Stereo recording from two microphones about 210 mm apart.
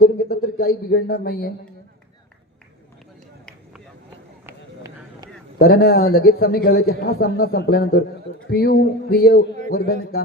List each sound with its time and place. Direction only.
0.0 s a sound: 50° left (ahead or behind)
4.4 s run: 15° right (ahead or behind)
5.5 s a man's voice: 45° left (ahead or behind)